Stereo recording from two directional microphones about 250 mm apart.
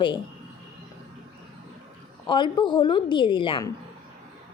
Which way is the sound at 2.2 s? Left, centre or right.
Centre.